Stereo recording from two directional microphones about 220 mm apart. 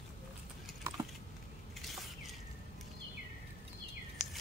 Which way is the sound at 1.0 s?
15° right (ahead or behind).